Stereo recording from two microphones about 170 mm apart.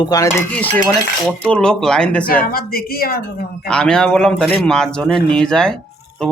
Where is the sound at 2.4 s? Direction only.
60° left (ahead or behind).